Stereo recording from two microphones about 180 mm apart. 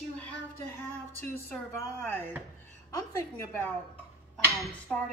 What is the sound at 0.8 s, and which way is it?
A woman's voice, 10° left (ahead or behind).